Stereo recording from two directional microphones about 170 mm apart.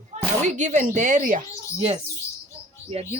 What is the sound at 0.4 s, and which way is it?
Speech, 45° right (ahead or behind).